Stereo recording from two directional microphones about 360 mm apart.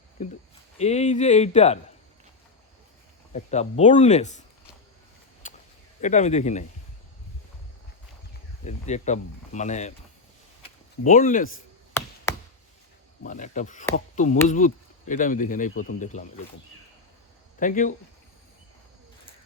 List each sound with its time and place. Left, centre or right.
0.2 s speech: centre
3.3 s speech: centre
5.4 s a sound: left
6.0 s speech: centre
8.6 s speech: centre
11.0 s speech: left
12.0 s chop: centre
13.2 s speech: left
17.6 s speech: left